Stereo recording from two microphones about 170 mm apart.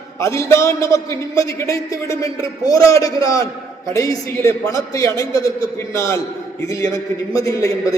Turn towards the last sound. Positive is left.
turn(degrees=20)  # may be behind; listen again after turning